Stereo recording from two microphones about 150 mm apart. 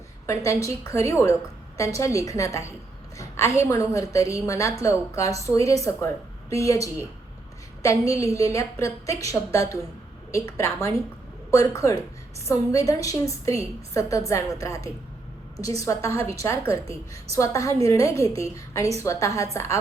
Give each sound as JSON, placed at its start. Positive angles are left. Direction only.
{"t": 0.3, "sound": "a woman's voice", "side_deg": 20}
{"t": 7.8, "sound": "a woman's voice", "side_deg": 20}